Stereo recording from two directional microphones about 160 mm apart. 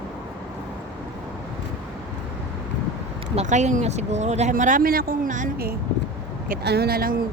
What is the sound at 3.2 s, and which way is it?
Speech, 45° right (ahead or behind).